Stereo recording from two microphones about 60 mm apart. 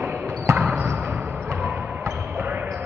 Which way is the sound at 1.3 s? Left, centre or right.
Right.